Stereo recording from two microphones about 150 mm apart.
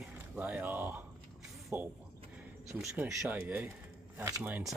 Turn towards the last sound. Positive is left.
turn(degrees=-15)  # may be behind; listen again after turning